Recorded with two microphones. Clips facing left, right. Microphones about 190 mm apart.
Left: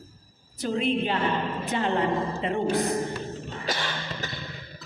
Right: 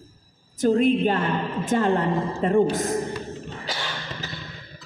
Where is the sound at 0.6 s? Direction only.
50° right (ahead or behind).